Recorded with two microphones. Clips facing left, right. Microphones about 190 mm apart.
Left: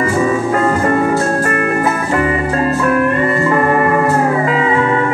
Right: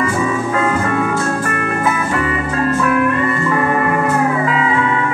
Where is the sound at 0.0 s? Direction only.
40° left (ahead or behind).